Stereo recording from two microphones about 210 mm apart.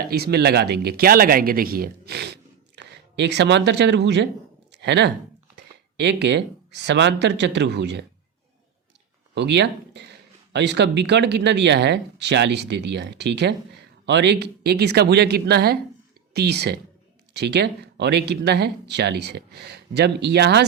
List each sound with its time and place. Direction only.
0.1 s speech: 50° right (ahead or behind)
4.7 s a sound: 55° right (ahead or behind)
6.0 s speech: 55° right (ahead or behind)
9.3 s speech: 55° right (ahead or behind)